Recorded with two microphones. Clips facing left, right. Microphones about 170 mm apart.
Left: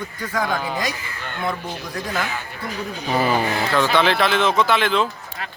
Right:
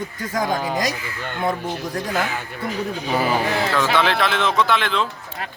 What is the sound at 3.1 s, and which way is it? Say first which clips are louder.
Speech: left 1 dB; 10° right (ahead or behind).